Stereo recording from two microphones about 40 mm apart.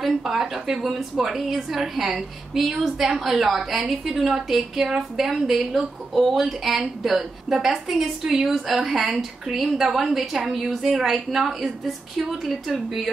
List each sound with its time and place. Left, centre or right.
0.0 s a woman's voice: centre